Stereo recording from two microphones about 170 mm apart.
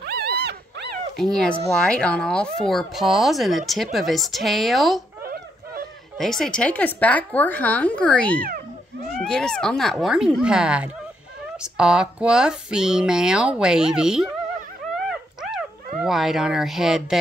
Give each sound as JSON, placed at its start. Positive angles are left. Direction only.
{"t": 0.0, "sound": "dog", "side_deg": -70}
{"t": 1.1, "sound": "speech", "side_deg": 5}
{"t": 6.1, "sound": "a woman's voice", "side_deg": 5}
{"t": 15.0, "sound": "dog", "side_deg": 0}